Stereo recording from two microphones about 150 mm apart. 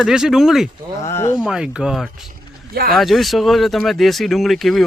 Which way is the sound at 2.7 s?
85° right.